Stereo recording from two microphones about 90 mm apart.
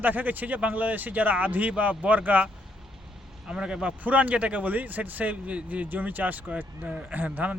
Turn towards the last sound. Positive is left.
turn(degrees=-20)  # may be behind; listen again after turning